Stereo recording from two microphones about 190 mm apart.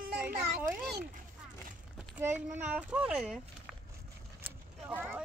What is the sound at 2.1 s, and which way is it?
A child's voice, 10° right (ahead or behind).